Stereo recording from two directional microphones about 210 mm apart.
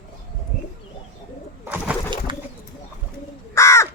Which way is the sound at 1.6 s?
10° right (ahead or behind).